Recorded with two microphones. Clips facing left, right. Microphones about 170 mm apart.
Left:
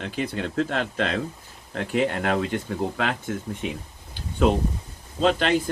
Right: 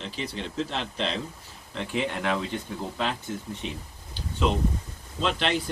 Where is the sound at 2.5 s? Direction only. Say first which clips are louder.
Left 6 dB; 70° left (ahead or behind).